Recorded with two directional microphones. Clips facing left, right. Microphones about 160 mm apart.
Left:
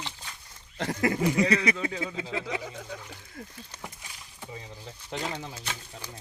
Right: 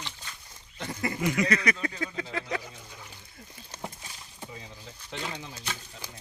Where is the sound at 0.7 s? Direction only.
90° left.